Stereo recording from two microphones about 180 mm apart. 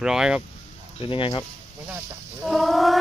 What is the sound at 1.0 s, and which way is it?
Speech, 30° left (ahead or behind).